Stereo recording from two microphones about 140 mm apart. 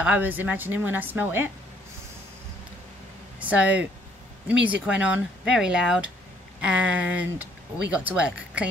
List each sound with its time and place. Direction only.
0.0 s speech: 10° right (ahead or behind)
3.3 s speech: 10° right (ahead or behind)